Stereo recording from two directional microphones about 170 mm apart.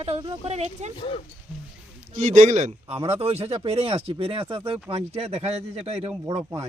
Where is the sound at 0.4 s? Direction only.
40° right (ahead or behind).